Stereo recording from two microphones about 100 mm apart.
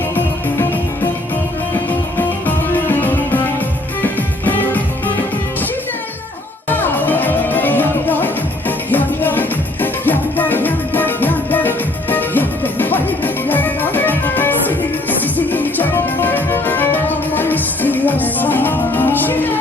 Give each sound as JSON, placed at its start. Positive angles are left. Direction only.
{"t": 2.7, "sound": "music", "side_deg": 20}
{"t": 6.7, "sound": "music", "side_deg": 20}